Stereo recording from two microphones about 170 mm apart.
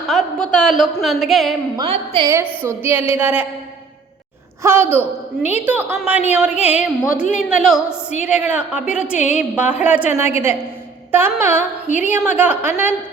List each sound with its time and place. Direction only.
0.1 s a sound: 5° left (ahead or behind)
1.0 s a woman's voice: centre (ahead or behind)
1.7 s a woman's voice: 30° right (ahead or behind)
2.6 s a woman's voice: 10° right (ahead or behind)
4.6 s a woman's voice: 15° right (ahead or behind)